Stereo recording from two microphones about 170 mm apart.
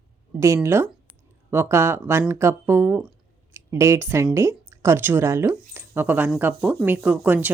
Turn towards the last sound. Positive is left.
turn(degrees=-10)  # may be behind; listen again after turning